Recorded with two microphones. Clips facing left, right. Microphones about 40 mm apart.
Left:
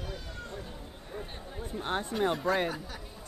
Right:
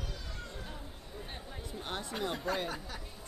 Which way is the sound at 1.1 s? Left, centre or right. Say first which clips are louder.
Left 5 dB; left.